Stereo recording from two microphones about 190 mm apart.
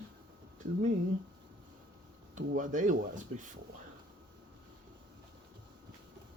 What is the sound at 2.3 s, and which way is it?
Speech, 45° right (ahead or behind).